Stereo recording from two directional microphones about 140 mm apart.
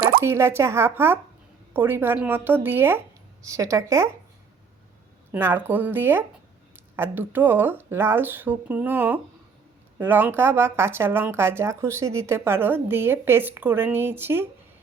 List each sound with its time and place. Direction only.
0.2 s a woman's voice: 20° right (ahead or behind)
5.3 s speech: 15° right (ahead or behind)